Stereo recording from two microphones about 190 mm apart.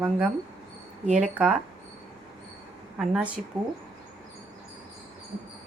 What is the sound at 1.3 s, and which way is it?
Speech, 5° right (ahead or behind).